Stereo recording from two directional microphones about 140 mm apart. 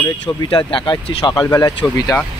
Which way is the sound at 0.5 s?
35° left (ahead or behind).